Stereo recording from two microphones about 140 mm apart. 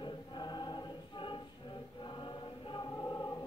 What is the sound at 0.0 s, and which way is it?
Choir, 35° left (ahead or behind).